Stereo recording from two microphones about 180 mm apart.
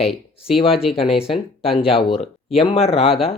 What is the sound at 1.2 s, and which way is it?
Speech, 30° left (ahead or behind).